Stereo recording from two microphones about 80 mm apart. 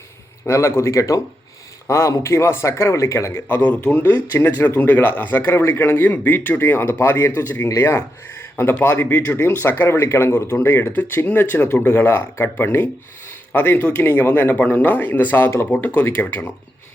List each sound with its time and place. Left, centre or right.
0.4 s a man's voice: left